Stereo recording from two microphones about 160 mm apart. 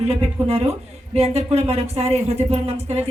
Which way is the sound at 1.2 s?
40° right (ahead or behind).